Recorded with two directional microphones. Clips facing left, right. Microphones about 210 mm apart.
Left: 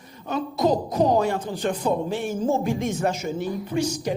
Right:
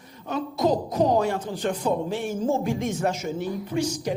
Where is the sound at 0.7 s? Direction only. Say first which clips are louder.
Left 1 dB; 30° left (ahead or behind).